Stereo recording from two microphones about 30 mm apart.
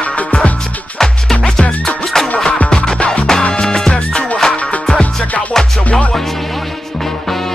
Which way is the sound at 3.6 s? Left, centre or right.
Left.